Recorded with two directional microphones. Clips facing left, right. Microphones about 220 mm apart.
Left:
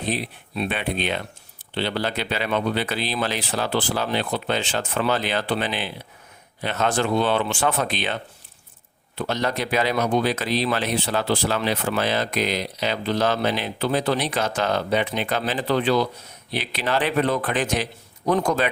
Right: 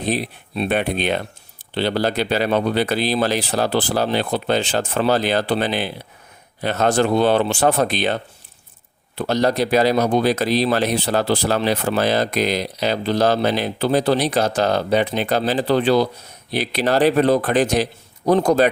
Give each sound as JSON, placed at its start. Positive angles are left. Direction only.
{"t": 0.1, "sound": "speech", "side_deg": -35}